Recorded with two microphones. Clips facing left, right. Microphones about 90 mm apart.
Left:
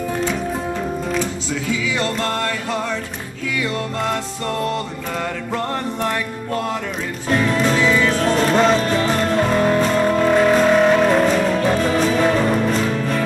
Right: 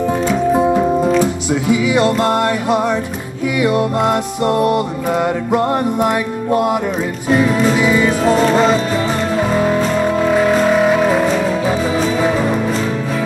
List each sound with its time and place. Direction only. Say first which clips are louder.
0.6 s music: right 10 dB; 20° right (ahead or behind)